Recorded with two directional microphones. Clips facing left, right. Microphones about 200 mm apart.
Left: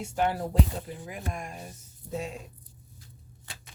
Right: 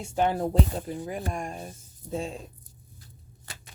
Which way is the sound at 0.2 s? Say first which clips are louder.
Right 3 dB; 25° right (ahead or behind).